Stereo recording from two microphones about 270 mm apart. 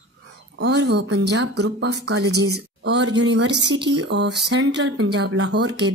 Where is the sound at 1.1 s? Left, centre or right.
Right.